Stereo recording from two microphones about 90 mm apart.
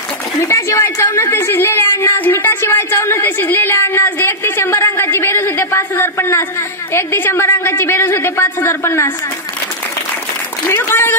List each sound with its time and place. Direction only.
0.4 s a woman's voice: 30° left (ahead or behind)
10.7 s a woman's voice: 25° left (ahead or behind)